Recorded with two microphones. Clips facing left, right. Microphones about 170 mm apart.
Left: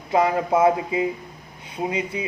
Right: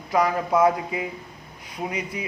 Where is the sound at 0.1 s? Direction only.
25° left (ahead or behind).